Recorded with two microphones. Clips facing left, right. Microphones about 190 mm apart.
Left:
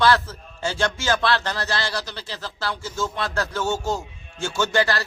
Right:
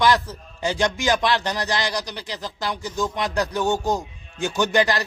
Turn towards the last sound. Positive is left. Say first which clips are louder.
# right 2 dB
turn(degrees=-15)  # may be behind; listen again after turning